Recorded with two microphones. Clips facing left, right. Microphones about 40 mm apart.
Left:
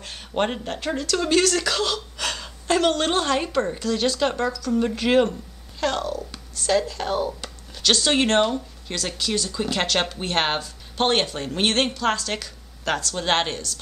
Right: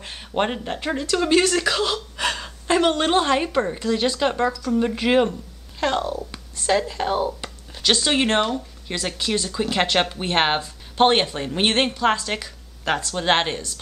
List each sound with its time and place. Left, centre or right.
0.0 s speech: centre
8.9 s speech: centre